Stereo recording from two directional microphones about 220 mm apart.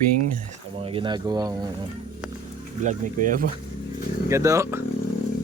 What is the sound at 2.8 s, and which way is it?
Speech, 35° right (ahead or behind).